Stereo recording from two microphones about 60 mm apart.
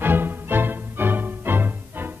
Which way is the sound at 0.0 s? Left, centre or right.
Right.